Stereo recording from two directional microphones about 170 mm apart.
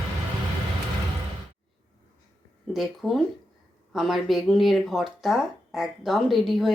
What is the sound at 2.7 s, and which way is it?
Speech, centre (ahead or behind).